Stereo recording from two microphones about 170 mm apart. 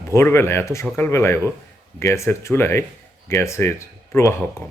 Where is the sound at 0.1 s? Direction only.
15° left (ahead or behind).